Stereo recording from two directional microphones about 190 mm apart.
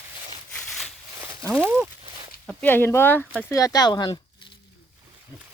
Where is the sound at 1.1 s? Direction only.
15° right (ahead or behind).